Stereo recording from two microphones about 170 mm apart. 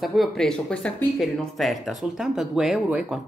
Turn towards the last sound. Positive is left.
turn(degrees=-5)  # may be behind; listen again after turning